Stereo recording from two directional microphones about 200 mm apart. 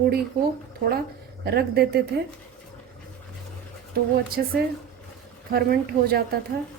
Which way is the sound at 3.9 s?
50° right (ahead or behind).